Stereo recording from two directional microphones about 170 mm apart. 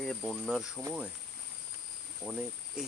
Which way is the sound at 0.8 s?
15° right (ahead or behind).